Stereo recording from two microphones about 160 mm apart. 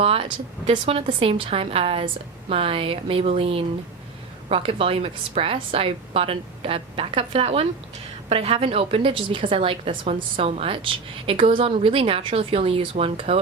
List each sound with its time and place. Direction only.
0.0 s speech: 35° right (ahead or behind)